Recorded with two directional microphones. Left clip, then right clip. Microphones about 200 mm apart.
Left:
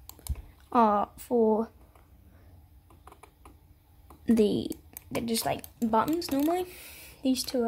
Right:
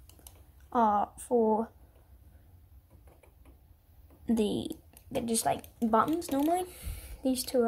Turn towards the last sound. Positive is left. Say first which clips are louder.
# even
turn(degrees=15)  # may be behind; listen again after turning